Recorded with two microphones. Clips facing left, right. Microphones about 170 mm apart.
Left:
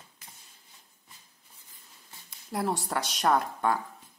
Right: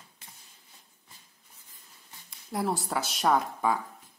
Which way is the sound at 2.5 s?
Centre (ahead or behind).